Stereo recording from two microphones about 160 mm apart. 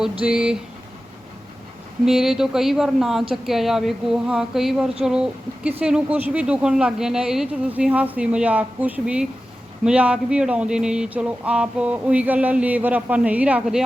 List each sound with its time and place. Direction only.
0.0 s speech: 5° right (ahead or behind)
2.0 s speech: centre (ahead or behind)